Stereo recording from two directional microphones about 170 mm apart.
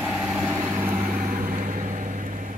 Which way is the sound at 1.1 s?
55° right (ahead or behind).